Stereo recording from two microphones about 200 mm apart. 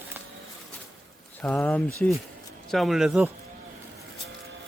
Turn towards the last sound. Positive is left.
turn(degrees=0)  # may be behind; listen again after turning